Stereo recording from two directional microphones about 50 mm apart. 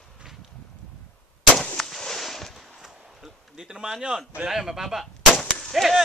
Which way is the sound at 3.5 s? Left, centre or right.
Centre.